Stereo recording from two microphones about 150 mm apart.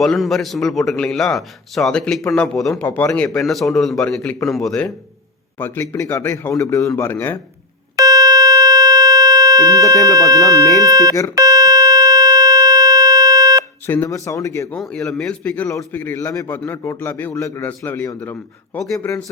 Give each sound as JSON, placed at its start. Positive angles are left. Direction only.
{"t": 0.0, "sound": "a man's voice", "side_deg": 0}
{"t": 2.8, "sound": "a man's voice", "side_deg": 15}
{"t": 3.2, "sound": "a man's voice", "side_deg": 0}
{"t": 5.5, "sound": "speech", "side_deg": 15}
{"t": 7.9, "sound": "a sound", "side_deg": -25}
{"t": 9.9, "sound": "speech", "side_deg": 20}
{"t": 10.2, "sound": "speech", "side_deg": -25}
{"t": 11.3, "sound": "buzzer", "side_deg": -25}
{"t": 13.8, "sound": "speech", "side_deg": 15}
{"t": 14.8, "sound": "a man's voice", "side_deg": 0}